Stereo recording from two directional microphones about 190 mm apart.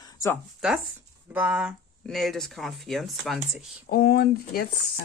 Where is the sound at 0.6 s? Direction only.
5° right (ahead or behind).